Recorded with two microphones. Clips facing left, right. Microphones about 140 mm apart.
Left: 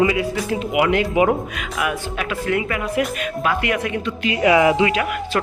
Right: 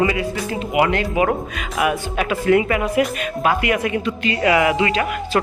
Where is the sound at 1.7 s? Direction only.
35° right (ahead or behind).